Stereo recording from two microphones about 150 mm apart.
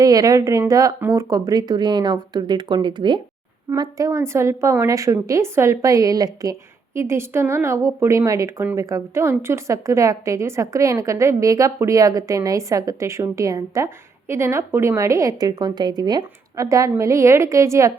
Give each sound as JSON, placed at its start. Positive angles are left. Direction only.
{"t": 0.0, "sound": "a woman's voice", "side_deg": -25}